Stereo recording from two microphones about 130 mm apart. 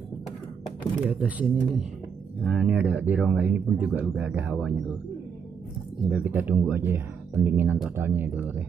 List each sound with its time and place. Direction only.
1.0 s speech: 10° right (ahead or behind)
1.4 s speech: centre (ahead or behind)
6.0 s speech: 10° right (ahead or behind)